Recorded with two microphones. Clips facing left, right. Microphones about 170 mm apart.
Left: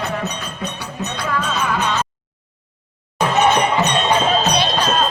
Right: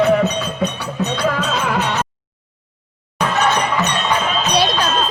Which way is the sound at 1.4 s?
80° right.